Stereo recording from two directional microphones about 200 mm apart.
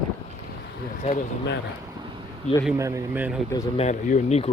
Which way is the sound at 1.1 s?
60° left (ahead or behind).